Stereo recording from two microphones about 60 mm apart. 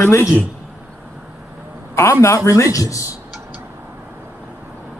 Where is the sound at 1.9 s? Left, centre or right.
Left.